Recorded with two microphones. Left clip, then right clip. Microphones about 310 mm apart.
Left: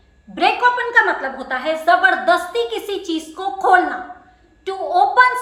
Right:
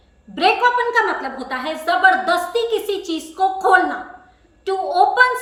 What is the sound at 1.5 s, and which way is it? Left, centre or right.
A woman's voice, centre.